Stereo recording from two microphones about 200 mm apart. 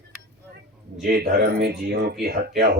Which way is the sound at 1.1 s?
50° right (ahead or behind).